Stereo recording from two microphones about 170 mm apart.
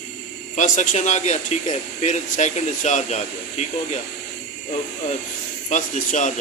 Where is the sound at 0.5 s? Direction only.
45° left (ahead or behind).